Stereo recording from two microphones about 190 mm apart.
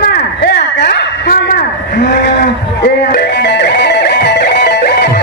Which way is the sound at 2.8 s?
60° left (ahead or behind).